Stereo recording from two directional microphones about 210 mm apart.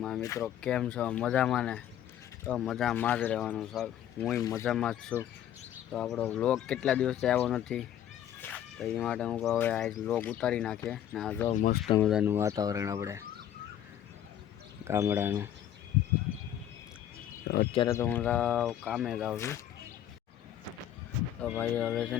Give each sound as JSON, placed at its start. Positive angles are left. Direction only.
{"t": 0.2, "sound": "speech", "side_deg": 15}
{"t": 0.4, "sound": "speech", "side_deg": 5}
{"t": 4.4, "sound": "speech", "side_deg": 15}
{"t": 4.6, "sound": "speech", "side_deg": 0}
{"t": 11.4, "sound": "speech", "side_deg": 40}
{"t": 11.9, "sound": "speech", "side_deg": 0}
{"t": 14.8, "sound": "speech", "side_deg": -15}
{"t": 17.7, "sound": "speech", "side_deg": 15}
{"t": 19.4, "sound": "speech", "side_deg": 15}
{"t": 21.4, "sound": "speech", "side_deg": 5}